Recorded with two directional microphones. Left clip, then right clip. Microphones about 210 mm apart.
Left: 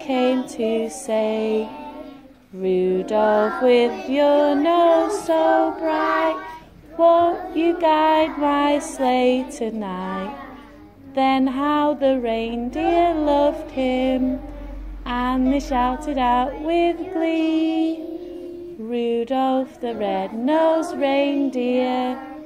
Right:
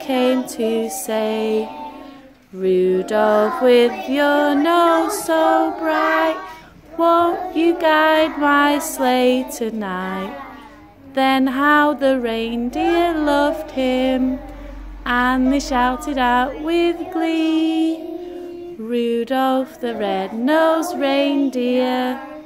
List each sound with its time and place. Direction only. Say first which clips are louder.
0.0 s a sound: right 2 dB; 15° right (ahead or behind)
0.6 s female singing: right 2 dB; 15° right (ahead or behind)
2.6 s female singing: right 4 dB; 15° right (ahead or behind)
5.9 s child singing: right 3 dB; 20° right (ahead or behind)
7.0 s female singing: even; 20° right (ahead or behind)